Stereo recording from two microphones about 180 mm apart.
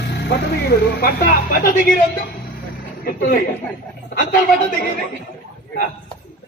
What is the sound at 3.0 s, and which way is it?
Speech, 50° left (ahead or behind).